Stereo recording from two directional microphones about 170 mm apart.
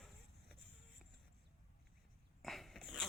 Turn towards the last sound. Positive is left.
turn(degrees=0)  # may be behind; listen again after turning